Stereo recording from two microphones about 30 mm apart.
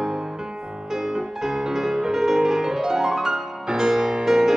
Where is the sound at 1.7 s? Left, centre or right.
Centre.